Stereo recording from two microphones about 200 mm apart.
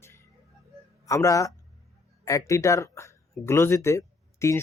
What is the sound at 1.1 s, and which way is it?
Speech, 15° left (ahead or behind).